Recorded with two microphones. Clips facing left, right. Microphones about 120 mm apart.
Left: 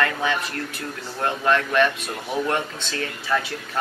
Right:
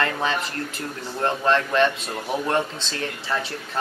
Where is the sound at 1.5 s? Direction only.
30° right (ahead or behind).